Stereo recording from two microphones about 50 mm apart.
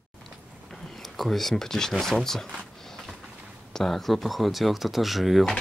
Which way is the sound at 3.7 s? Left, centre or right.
Centre.